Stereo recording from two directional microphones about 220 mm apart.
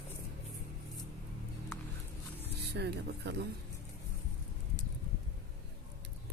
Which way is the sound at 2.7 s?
50° right (ahead or behind).